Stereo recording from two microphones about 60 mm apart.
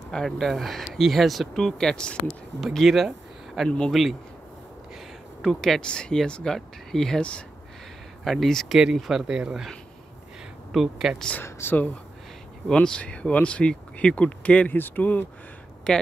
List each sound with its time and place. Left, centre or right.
0.1 s speech: centre
2.6 s speech: centre
5.4 s speech: centre
7.2 s speech: centre
8.2 s speech: centre
8.6 s a sound: centre
8.9 s speech: centre
9.3 s speech: centre
10.7 s speech: centre
11.4 s speech: left
12.7 s speech: centre
14.8 s speech: left
15.9 s speech: centre